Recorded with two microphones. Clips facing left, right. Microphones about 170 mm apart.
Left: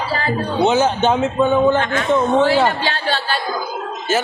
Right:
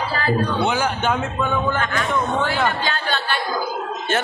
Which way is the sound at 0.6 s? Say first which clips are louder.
Left 6 dB; 20° left (ahead or behind).